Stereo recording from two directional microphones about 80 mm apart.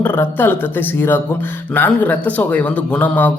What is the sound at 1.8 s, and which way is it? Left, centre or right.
A man's voice, left.